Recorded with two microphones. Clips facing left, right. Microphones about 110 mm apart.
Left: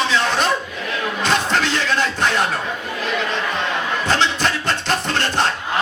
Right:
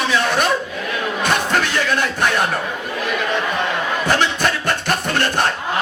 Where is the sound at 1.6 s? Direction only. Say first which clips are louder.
Right 1 dB; 15° right (ahead or behind).